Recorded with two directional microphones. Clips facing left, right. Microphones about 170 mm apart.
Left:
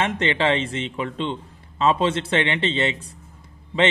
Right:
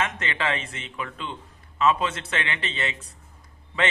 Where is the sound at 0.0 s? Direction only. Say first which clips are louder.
Left 6 dB; 30° left (ahead or behind).